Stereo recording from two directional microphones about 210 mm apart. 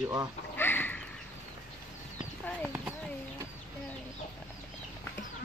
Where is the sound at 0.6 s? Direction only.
10° left (ahead or behind).